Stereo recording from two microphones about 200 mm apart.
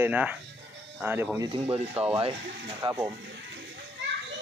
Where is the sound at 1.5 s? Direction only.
30° right (ahead or behind).